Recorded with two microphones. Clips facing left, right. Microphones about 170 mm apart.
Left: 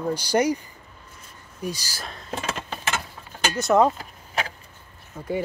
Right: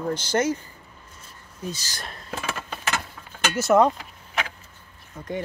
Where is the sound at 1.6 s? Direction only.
10° left (ahead or behind).